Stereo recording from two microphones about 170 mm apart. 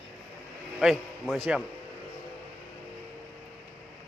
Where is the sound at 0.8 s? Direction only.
Centre (ahead or behind).